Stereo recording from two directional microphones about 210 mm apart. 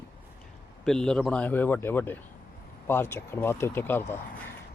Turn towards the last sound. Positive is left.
turn(degrees=10)  # may be behind; listen again after turning